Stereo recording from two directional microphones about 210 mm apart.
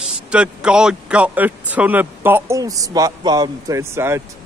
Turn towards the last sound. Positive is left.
turn(degrees=-10)  # may be behind; listen again after turning